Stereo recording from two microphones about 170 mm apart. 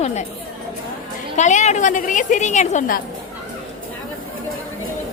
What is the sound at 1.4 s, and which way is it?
A woman's voice, 45° left (ahead or behind).